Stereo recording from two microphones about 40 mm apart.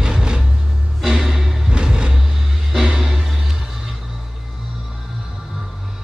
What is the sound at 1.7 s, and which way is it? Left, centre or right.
Vehicle, right.